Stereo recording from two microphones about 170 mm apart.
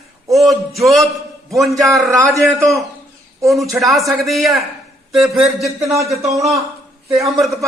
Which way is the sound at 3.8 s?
Centre (ahead or behind).